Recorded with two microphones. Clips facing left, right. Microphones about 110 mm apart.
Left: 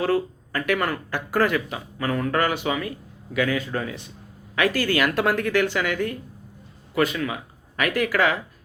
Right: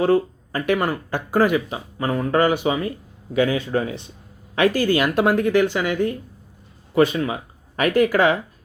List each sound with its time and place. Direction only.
0.0 s speech: 20° right (ahead or behind)